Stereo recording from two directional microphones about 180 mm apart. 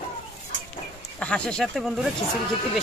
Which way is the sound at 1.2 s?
5° left (ahead or behind).